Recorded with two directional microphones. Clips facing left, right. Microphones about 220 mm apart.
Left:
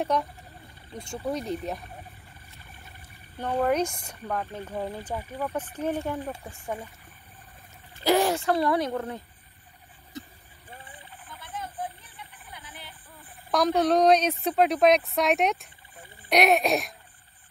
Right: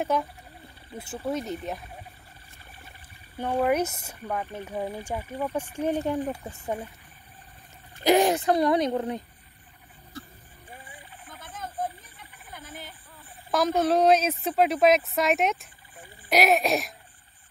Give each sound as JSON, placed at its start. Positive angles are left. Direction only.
{"t": 0.0, "sound": "a woman's voice", "side_deg": -5}
{"t": 3.3, "sound": "speech", "side_deg": -10}
{"t": 8.0, "sound": "speech", "side_deg": -15}
{"t": 10.1, "sound": "vehicle", "side_deg": 20}
{"t": 11.2, "sound": "a sound", "side_deg": -45}
{"t": 13.5, "sound": "a woman's voice", "side_deg": 0}